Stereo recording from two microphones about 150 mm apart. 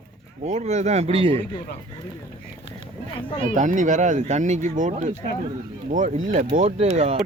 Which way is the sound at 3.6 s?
55° right (ahead or behind).